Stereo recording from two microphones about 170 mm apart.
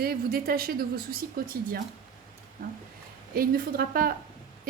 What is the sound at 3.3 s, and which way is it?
Speech, 60° right (ahead or behind).